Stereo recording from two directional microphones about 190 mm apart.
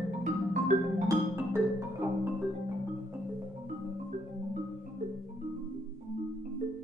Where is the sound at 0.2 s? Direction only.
40° right (ahead or behind).